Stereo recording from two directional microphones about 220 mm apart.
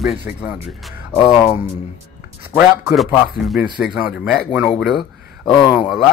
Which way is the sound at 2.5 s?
5° right (ahead or behind).